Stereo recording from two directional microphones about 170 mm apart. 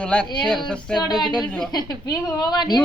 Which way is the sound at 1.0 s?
25° left (ahead or behind).